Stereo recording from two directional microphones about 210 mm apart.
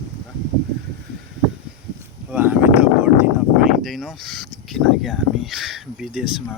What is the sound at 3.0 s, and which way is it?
Speech, 10° right (ahead or behind).